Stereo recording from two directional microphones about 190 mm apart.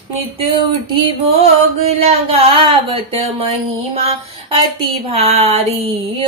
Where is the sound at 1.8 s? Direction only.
30° right (ahead or behind).